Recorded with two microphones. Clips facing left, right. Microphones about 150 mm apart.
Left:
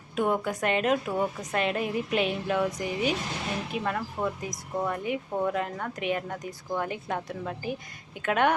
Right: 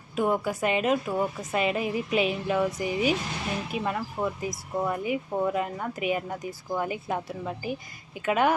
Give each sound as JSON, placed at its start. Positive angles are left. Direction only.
{"t": 0.2, "sound": "a woman's voice", "side_deg": -5}